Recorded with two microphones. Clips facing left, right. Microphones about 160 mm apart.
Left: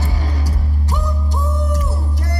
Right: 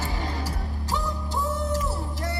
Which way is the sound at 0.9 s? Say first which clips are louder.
Left 2 dB; 20° left (ahead or behind).